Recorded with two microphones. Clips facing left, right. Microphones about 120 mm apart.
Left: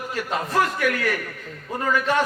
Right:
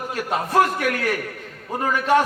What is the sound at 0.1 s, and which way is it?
A man's voice, 50° right (ahead or behind).